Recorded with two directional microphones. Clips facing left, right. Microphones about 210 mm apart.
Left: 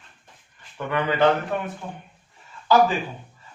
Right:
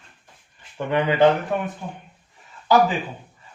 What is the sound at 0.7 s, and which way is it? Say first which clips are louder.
Speech: right 3 dB; 20° right (ahead or behind).